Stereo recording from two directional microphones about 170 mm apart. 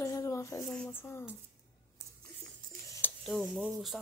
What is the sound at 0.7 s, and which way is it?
Speech, 10° left (ahead or behind).